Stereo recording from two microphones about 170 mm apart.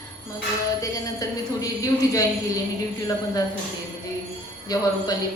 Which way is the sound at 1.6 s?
20° left (ahead or behind).